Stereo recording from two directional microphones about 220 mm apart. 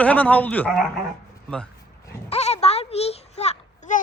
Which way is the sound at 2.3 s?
30° left (ahead or behind).